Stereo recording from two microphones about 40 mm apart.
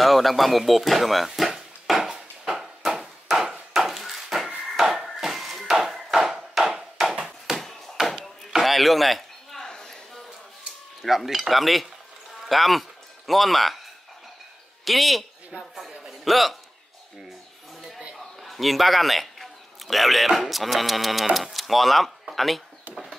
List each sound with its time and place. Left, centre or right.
0.0 s a sound: centre
7.2 s bouncing: centre
8.0 s chop: centre
8.5 s chop: centre
9.6 s a sound: centre
11.0 s cutlery: centre
12.4 s speech: centre
13.3 s cutlery: centre
14.9 s cutlery: centre
16.1 s a sound: centre
18.1 s speech: centre